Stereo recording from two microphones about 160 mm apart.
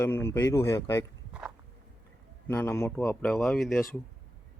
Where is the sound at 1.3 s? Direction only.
5° right (ahead or behind).